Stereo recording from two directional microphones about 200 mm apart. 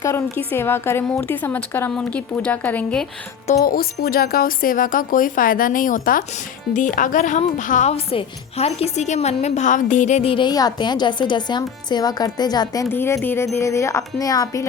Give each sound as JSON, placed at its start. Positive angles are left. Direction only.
{"t": 0.0, "sound": "a woman's voice", "side_deg": 15}
{"t": 3.6, "sound": "a woman's voice", "side_deg": 45}